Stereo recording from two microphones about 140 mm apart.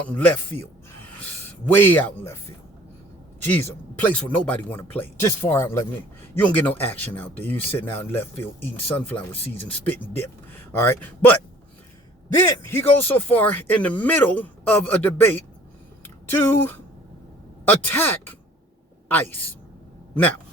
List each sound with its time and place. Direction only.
1.6 s speech: 15° left (ahead or behind)
3.4 s speech: 15° left (ahead or behind)
12.6 s a woman's voice: 15° left (ahead or behind)